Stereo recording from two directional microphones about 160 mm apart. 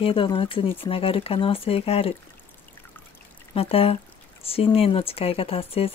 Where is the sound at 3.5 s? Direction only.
35° left (ahead or behind).